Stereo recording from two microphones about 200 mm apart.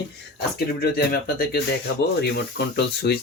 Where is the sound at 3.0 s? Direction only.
55° left (ahead or behind).